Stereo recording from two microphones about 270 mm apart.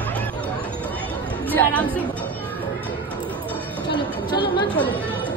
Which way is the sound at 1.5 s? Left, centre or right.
Centre.